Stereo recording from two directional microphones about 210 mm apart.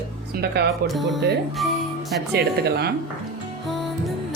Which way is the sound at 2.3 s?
50° right (ahead or behind).